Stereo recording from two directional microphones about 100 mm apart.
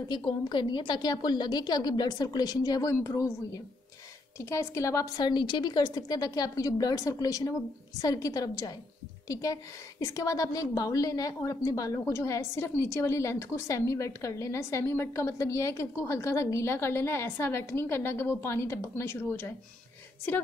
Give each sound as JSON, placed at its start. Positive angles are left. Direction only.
{"t": 0.1, "sound": "a woman's voice", "side_deg": 50}
{"t": 4.4, "sound": "a woman's voice", "side_deg": 30}